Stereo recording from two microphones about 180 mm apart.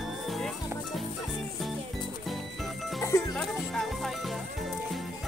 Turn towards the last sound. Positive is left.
turn(degrees=0)  # may be behind; listen again after turning